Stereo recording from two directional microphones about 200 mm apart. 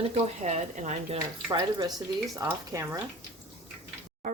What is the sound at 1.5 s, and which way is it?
Speech, 20° right (ahead or behind).